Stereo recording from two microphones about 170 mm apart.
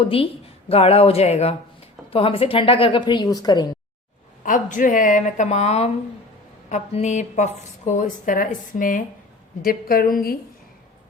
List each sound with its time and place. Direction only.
0.7 s a woman's voice: 35° left (ahead or behind)
4.4 s a woman's voice: 50° left (ahead or behind)